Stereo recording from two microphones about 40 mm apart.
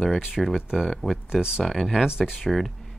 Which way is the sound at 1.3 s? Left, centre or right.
Centre.